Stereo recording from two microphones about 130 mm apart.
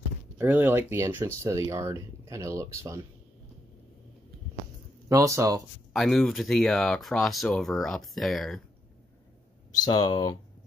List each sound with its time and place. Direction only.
0.4 s speech: 15° right (ahead or behind)
5.0 s speech: 25° right (ahead or behind)
5.9 s speech: centre (ahead or behind)
9.8 s speech: 35° left (ahead or behind)